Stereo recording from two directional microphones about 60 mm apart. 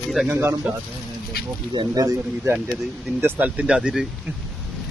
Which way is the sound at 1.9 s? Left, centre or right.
Right.